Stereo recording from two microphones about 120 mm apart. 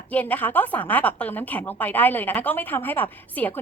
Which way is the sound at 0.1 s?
15° left (ahead or behind).